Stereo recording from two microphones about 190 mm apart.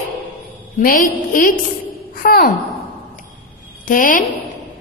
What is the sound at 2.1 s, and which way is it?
Sigh, 50° left (ahead or behind).